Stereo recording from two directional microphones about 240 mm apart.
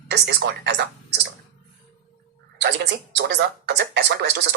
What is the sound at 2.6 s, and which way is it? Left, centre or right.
Speech, right.